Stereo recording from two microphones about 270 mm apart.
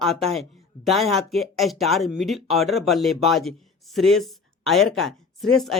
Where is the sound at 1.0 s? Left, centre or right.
Right.